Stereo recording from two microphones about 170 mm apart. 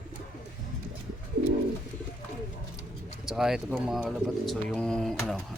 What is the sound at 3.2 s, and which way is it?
Speech, 5° right (ahead or behind).